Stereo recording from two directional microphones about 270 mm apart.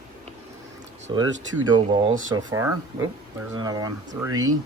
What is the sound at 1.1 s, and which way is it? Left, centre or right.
Speech, centre.